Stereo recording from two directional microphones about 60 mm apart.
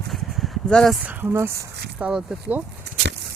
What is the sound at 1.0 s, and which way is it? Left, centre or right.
Speech, right.